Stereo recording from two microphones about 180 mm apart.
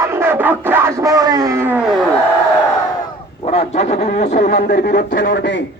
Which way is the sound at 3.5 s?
35° left (ahead or behind).